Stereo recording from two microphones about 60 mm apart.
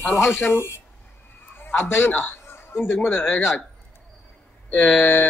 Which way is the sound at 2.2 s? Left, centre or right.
Left.